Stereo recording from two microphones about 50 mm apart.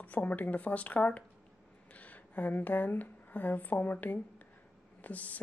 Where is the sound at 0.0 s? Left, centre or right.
Left.